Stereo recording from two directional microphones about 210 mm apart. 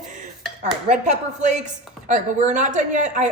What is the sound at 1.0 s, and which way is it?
A woman's voice, 35° right (ahead or behind).